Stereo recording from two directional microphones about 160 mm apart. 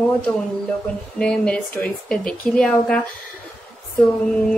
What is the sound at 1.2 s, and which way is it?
A woman's voice, 5° left (ahead or behind).